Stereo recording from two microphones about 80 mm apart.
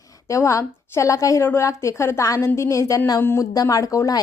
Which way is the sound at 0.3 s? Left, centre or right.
Left.